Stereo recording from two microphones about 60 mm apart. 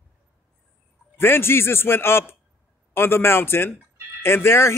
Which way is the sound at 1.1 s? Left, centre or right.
Left.